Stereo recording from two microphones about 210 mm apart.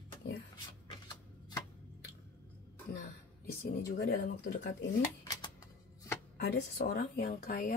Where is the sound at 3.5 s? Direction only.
45° left (ahead or behind).